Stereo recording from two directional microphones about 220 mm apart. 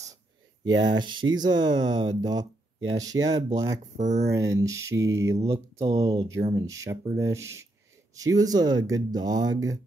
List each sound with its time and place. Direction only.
0.7 s speech: 20° right (ahead or behind)
4.0 s speech: 30° right (ahead or behind)
4.3 s speech: 15° right (ahead or behind)